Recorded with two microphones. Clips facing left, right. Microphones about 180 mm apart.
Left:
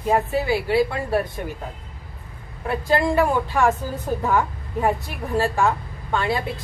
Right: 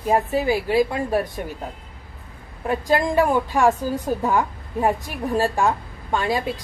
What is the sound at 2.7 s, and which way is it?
A woman's voice, 15° right (ahead or behind).